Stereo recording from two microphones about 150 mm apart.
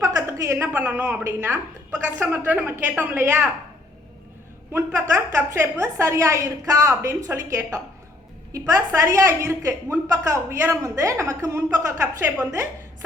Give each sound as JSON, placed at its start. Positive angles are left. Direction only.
{"t": 0.0, "sound": "a woman's voice", "side_deg": -20}
{"t": 4.7, "sound": "a woman's voice", "side_deg": -15}